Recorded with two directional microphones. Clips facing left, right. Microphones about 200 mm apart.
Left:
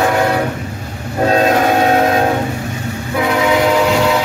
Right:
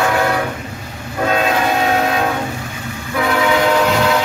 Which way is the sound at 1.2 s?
40° left (ahead or behind).